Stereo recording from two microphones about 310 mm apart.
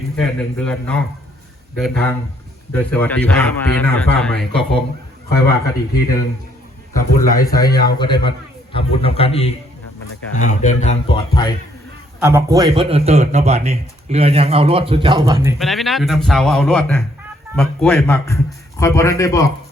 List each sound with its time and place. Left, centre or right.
0.2 s a man's voice: centre
6.9 s a man's voice: centre
12.2 s a man's voice: centre